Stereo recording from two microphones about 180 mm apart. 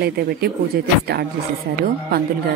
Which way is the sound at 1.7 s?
55° right (ahead or behind).